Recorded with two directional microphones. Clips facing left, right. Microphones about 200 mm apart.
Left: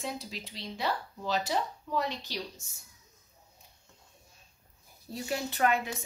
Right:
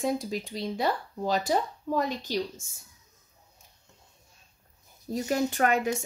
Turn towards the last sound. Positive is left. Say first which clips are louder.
# right 3 dB
turn(degrees=-45)  # may be behind; listen again after turning